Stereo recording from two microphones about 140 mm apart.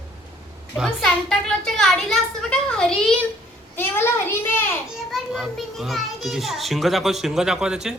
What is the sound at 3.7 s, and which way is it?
Speech, 15° left (ahead or behind).